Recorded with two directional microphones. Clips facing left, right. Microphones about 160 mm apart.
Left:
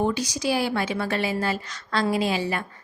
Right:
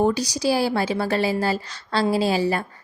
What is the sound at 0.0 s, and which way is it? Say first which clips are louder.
Speech: right 4 dB; 35° right (ahead or behind).